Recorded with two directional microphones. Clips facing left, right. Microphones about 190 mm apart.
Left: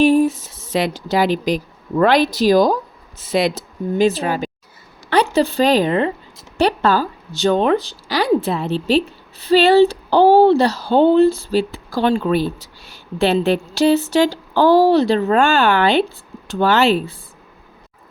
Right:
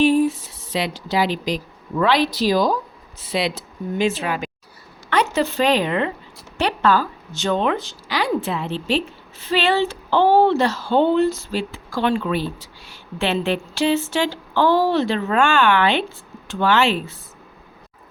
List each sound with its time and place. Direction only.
0.0 s speech: 45° left (ahead or behind)